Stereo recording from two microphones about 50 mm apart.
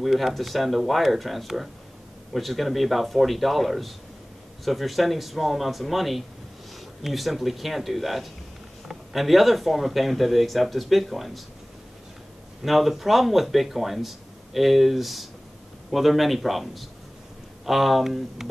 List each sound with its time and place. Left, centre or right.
0.0 s speech: centre
12.6 s speech: centre